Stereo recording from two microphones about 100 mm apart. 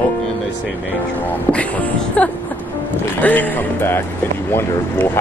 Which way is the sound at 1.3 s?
15° left (ahead or behind).